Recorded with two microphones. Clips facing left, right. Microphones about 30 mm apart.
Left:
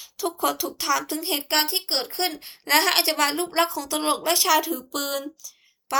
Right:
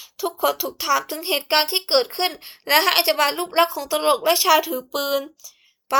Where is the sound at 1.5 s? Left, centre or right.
Right; by 6.0 s centre.